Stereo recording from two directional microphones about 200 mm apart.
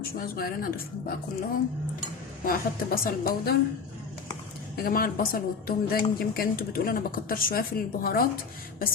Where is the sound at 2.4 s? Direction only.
45° left (ahead or behind).